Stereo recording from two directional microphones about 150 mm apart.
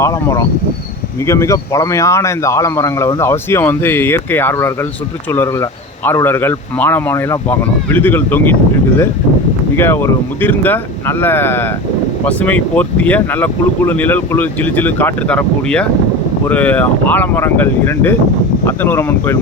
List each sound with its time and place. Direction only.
0.0 s speech: 20° left (ahead or behind)
9.7 s speech: 15° left (ahead or behind)